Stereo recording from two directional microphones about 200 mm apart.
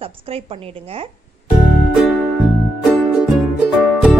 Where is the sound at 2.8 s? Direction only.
Centre (ahead or behind).